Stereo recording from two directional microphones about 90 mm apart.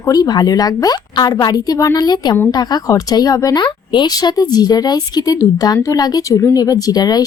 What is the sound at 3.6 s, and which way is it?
A woman's voice, 60° left (ahead or behind).